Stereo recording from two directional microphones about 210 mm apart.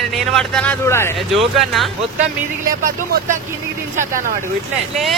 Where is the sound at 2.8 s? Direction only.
40° right (ahead or behind).